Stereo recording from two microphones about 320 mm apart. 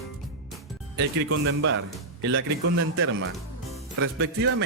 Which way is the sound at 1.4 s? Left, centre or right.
Right.